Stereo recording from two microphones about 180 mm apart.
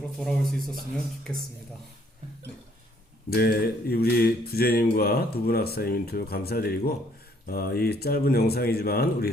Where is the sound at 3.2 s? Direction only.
60° left (ahead or behind).